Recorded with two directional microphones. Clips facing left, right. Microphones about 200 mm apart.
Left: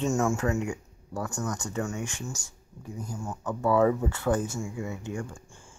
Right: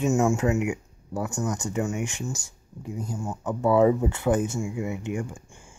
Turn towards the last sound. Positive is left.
turn(degrees=-15)  # may be behind; listen again after turning